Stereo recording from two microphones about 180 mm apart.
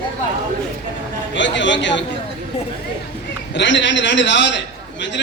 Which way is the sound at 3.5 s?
90° left.